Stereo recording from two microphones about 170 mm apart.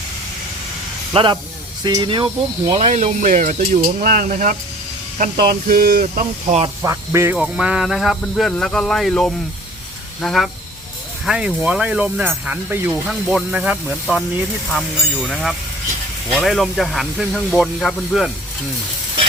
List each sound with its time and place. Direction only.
1.1 s speech: 25° right (ahead or behind); by 6.6 s 50° right (ahead or behind)
6.8 s speech: 15° right (ahead or behind)
7.3 s speech: 5° right (ahead or behind)